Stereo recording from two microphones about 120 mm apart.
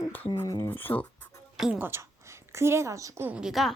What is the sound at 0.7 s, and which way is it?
Speech, 15° left (ahead or behind).